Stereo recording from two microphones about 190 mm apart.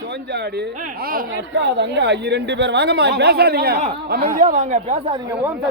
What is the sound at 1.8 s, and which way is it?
Speech, 65° right (ahead or behind).